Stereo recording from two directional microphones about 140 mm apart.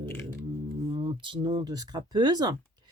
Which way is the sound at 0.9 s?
35° right (ahead or behind).